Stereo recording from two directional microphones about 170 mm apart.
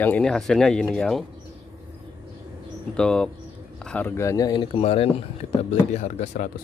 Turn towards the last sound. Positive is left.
turn(degrees=45)  # may be behind; listen again after turning